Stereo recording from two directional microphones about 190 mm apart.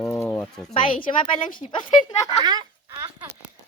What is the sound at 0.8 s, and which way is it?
Speech, 25° left (ahead or behind).